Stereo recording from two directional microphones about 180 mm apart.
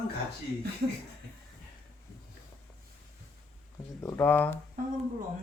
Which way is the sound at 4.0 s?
15° left (ahead or behind).